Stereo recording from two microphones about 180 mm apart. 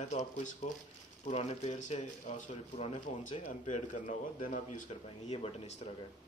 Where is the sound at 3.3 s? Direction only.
30° left (ahead or behind).